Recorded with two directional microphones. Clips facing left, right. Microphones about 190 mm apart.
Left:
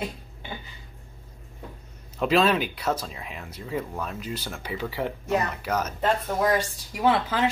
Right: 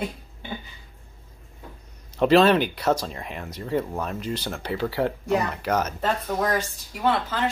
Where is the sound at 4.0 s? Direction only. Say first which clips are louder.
Right 4 dB; centre (ahead or behind).